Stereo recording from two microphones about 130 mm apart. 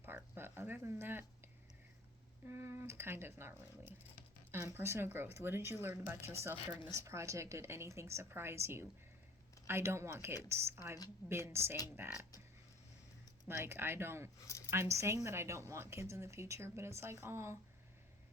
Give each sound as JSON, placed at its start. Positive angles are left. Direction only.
{"t": 0.3, "sound": "speech", "side_deg": -15}
{"t": 2.5, "sound": "a woman's voice", "side_deg": -20}
{"t": 13.5, "sound": "a woman's voice", "side_deg": -20}